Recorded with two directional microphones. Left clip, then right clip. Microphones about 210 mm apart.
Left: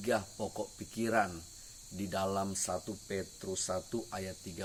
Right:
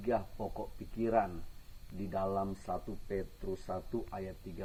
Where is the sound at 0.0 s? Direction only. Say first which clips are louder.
Left 1 dB; 30° left (ahead or behind).